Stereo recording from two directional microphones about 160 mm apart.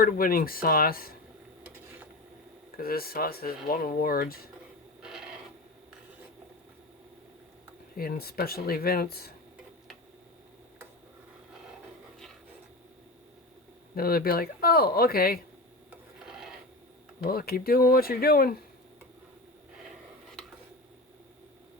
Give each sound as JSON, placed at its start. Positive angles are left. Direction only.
{"t": 0.0, "sound": "speech", "side_deg": 65}
{"t": 2.7, "sound": "speech", "side_deg": 70}
{"t": 5.0, "sound": "filing", "side_deg": -5}
{"t": 7.9, "sound": "speech", "side_deg": 70}
{"t": 13.9, "sound": "speech", "side_deg": 70}
{"t": 16.2, "sound": "filing", "side_deg": -5}
{"t": 17.2, "sound": "speech", "side_deg": 70}